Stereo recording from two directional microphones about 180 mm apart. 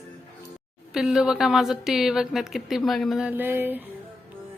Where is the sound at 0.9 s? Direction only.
Centre (ahead or behind).